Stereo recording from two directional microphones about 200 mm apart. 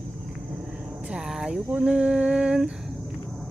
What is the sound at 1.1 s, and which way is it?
Speech, 5° right (ahead or behind).